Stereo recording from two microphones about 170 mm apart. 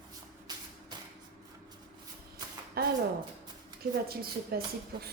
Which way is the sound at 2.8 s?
65° right (ahead or behind).